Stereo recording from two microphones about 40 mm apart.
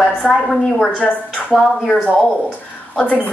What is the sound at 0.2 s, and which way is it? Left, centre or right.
Speech, centre.